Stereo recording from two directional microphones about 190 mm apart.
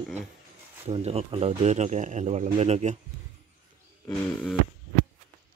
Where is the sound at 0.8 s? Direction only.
30° right (ahead or behind).